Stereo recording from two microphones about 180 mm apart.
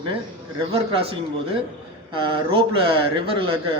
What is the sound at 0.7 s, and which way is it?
A man's voice, 30° right (ahead or behind).